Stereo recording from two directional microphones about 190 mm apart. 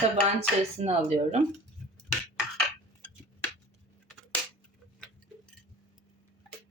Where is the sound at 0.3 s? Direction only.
35° right (ahead or behind).